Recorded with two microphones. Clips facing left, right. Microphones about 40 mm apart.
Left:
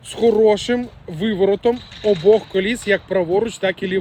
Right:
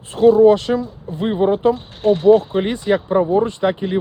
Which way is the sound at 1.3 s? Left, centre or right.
Left.